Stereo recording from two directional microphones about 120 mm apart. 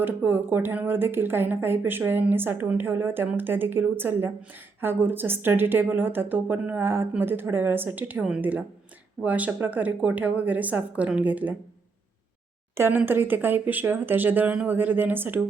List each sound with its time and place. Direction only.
0.0 s speech: 15° right (ahead or behind)
12.7 s speech: 20° right (ahead or behind)